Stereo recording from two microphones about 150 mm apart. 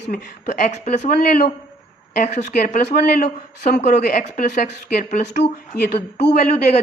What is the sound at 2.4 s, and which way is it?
A woman's voice, 90° left.